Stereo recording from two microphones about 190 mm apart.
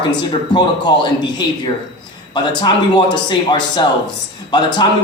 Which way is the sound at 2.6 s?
25° left (ahead or behind).